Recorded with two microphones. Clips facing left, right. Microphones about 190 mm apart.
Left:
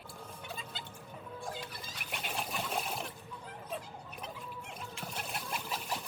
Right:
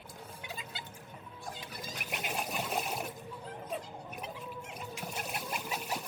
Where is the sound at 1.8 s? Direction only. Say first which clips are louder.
Right 3 dB; 5° right (ahead or behind).